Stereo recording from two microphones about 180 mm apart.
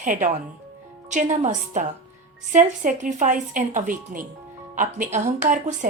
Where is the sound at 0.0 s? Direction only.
45° right (ahead or behind).